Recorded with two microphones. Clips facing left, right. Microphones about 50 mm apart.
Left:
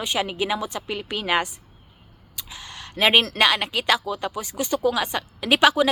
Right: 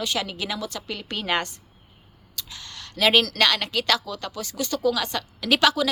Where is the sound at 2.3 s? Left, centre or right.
Centre.